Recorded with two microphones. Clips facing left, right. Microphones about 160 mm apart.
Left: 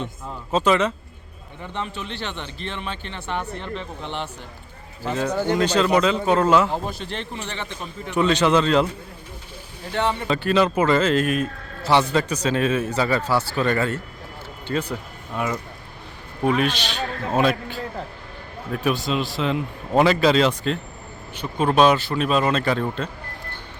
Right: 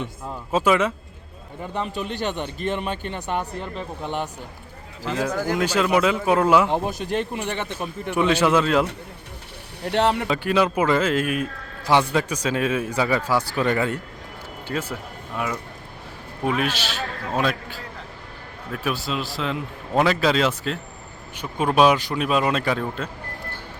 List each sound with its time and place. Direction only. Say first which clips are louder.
0.5 s speech: even; 10° right (ahead or behind)
1.9 s a man's voice: right 5 dB; 40° right (ahead or behind)
3.2 s speech: right 2 dB; 15° right (ahead or behind)
5.3 s speech: left 5 dB; 25° left (ahead or behind)
5.5 s speech: left 1 dB; 10° right (ahead or behind)
9.8 s speech: right 3 dB; 70° right (ahead or behind)
10.2 s speech: left 1 dB; 10° right (ahead or behind)
16.4 s a man's voice: left 3 dB; 5° right (ahead or behind)